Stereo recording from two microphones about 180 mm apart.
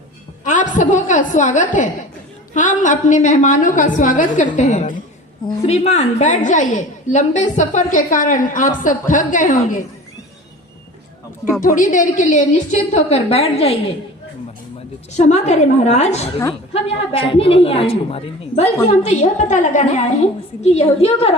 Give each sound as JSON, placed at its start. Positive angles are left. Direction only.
{"t": 0.4, "sound": "a woman's voice", "side_deg": 45}
{"t": 11.6, "sound": "a woman's voice", "side_deg": 45}
{"t": 15.1, "sound": "a woman's voice", "side_deg": 40}